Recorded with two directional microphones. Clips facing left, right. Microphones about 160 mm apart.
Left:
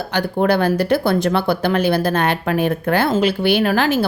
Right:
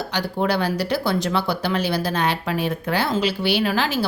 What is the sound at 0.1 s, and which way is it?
Speech, 55° left (ahead or behind).